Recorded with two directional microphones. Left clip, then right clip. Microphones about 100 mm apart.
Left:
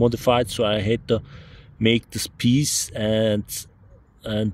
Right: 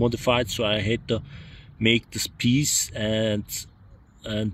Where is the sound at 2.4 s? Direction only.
35° left (ahead or behind).